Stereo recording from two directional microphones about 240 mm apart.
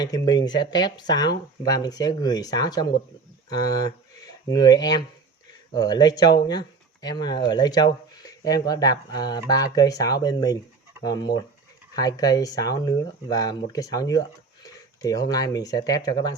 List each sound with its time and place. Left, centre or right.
0.0 s speech: centre